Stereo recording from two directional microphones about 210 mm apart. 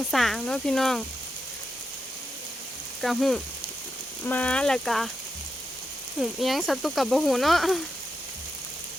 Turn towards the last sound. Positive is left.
turn(degrees=0)  # may be behind; listen again after turning